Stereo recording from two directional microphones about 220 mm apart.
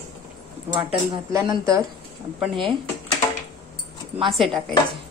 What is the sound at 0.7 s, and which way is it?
Speech, 25° right (ahead or behind).